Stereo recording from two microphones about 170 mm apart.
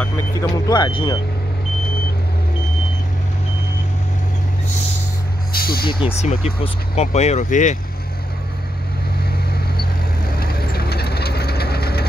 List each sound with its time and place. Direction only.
0.0 s vehicle: 20° left (ahead or behind)
5.5 s vehicle: 65° left (ahead or behind)
5.9 s speech: 30° left (ahead or behind)
10.4 s vehicle: 65° left (ahead or behind)